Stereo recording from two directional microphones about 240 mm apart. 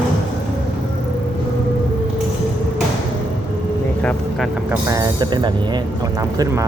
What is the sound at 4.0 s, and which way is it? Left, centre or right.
Vehicle, centre.